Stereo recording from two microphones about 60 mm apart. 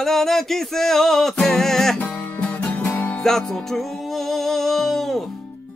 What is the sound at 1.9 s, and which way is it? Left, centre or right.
Music, left.